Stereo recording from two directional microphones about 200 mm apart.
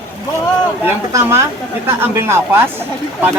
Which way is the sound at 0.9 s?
10° right (ahead or behind).